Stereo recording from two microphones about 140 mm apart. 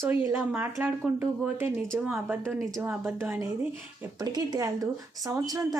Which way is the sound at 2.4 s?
25° right (ahead or behind).